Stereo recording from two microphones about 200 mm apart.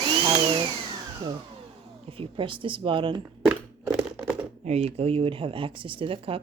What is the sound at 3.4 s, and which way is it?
Crunch, 5° right (ahead or behind).